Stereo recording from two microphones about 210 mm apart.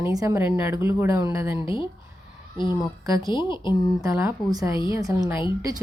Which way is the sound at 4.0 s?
15° right (ahead or behind).